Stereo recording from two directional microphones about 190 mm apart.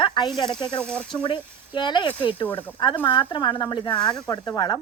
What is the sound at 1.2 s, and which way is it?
Speech, 25° left (ahead or behind).